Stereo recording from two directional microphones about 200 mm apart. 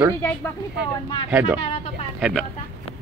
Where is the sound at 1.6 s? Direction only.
30° left (ahead or behind).